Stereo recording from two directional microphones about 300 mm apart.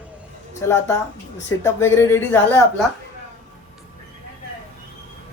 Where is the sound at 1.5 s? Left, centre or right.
Centre.